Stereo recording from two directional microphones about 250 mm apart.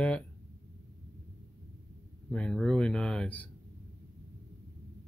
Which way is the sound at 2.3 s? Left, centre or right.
Centre.